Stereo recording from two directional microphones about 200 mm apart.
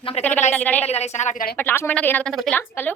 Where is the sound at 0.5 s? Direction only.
10° left (ahead or behind).